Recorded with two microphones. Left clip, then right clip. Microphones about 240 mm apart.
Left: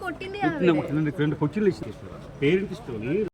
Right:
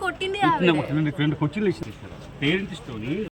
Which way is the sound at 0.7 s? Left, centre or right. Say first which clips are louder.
Right 1 dB; right.